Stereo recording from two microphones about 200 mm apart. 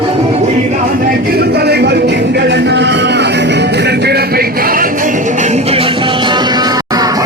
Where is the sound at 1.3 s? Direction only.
55° right (ahead or behind).